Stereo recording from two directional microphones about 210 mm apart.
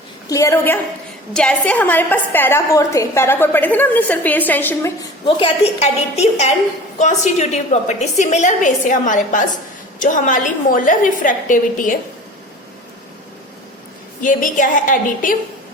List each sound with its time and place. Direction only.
0.3 s a woman's voice: 15° left (ahead or behind)
5.2 s a woman's voice: 30° left (ahead or behind)
14.2 s a woman's voice: 40° left (ahead or behind)